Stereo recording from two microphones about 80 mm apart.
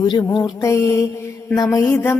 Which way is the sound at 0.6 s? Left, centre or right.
Left.